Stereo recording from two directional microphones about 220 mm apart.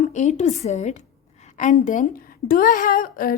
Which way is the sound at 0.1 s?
35° left (ahead or behind).